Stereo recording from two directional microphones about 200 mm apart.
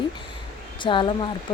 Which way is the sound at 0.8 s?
25° left (ahead or behind).